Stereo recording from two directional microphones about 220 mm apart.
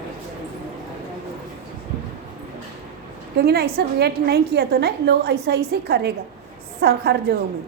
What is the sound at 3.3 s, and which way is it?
A woman's voice, 45° right (ahead or behind).